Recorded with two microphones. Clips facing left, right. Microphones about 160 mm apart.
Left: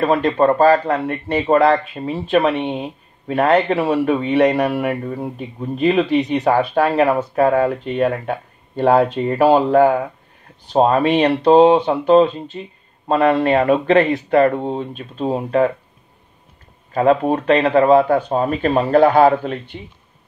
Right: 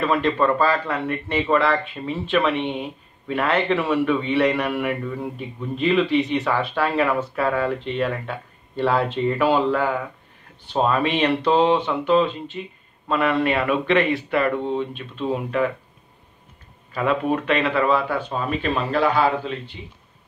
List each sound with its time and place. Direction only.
0.0 s a man's voice: 40° left (ahead or behind)
16.9 s speech: 40° left (ahead or behind)